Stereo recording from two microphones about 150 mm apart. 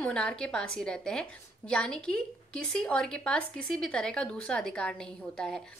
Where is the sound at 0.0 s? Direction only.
5° left (ahead or behind).